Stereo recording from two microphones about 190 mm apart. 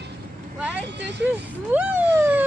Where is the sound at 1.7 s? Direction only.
10° right (ahead or behind).